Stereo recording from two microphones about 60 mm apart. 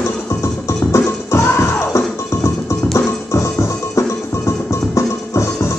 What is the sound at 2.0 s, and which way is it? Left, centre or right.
Music, left.